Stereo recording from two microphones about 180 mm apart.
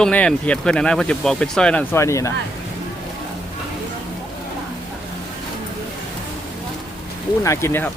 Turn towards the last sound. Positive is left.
turn(degrees=15)  # may be behind; listen again after turning